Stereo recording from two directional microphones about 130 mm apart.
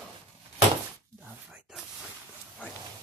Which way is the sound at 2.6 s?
15° left (ahead or behind).